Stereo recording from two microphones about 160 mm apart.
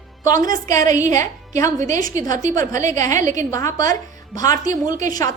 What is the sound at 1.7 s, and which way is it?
A woman's voice, 50° right (ahead or behind).